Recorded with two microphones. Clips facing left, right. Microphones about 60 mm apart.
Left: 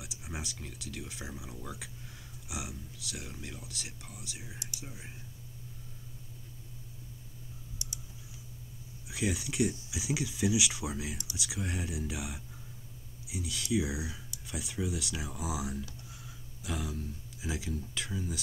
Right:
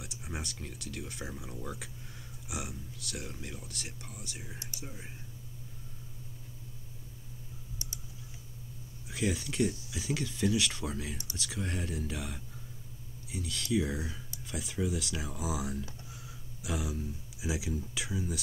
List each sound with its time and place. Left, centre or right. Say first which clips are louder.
0.0 s speech: right 1 dB; centre
7.8 s typing: left 1 dB; right
9.0 s speech: right 1 dB; centre